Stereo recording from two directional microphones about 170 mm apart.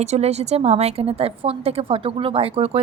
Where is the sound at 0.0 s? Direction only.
40° right (ahead or behind).